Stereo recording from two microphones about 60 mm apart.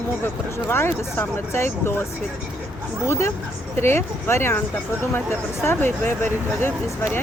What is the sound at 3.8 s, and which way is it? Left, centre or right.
Speech, left.